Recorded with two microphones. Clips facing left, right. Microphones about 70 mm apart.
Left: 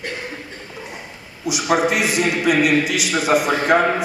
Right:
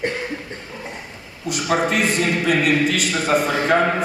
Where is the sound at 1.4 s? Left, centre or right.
Centre.